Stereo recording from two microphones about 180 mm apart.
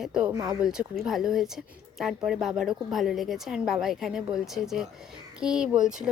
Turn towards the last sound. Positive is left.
turn(degrees=-5)  # may be behind; listen again after turning